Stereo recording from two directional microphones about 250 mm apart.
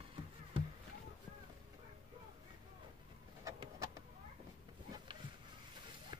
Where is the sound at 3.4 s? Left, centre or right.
Centre.